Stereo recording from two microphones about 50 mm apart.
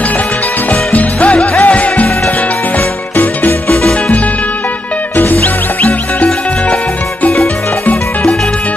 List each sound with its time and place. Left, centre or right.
0.9 s music: left
5.1 s music: left
7.8 s music: left